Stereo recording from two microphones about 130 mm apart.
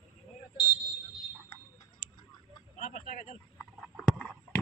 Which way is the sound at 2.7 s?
85° left.